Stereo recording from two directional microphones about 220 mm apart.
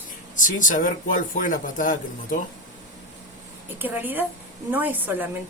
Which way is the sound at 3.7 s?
10° right (ahead or behind).